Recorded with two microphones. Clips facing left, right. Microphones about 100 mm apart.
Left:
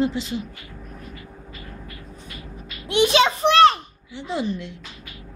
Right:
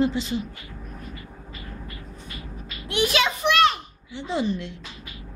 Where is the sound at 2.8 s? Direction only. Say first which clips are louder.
Left 5 dB; 25° left (ahead or behind).